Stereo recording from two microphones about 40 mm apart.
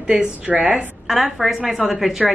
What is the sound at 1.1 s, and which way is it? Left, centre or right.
A woman's voice, centre.